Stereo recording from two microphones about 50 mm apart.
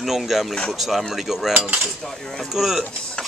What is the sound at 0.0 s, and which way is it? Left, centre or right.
Speech, centre.